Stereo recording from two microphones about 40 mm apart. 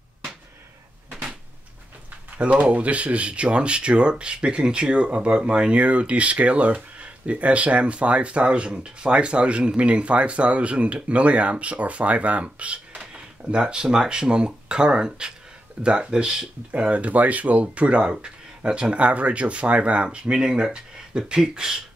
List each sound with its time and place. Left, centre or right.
2.3 s speech: right
18.1 s speech: right